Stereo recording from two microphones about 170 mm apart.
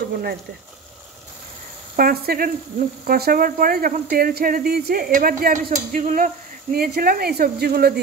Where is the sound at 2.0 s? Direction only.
60° right (ahead or behind).